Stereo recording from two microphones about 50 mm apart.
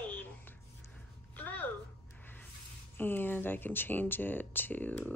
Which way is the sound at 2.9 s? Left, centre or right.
Left.